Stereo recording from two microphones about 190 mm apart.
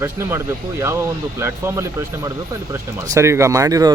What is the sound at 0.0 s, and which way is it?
Speech, 10° right (ahead or behind).